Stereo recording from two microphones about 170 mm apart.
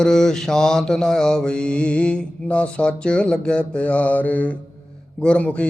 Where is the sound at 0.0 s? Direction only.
5° left (ahead or behind).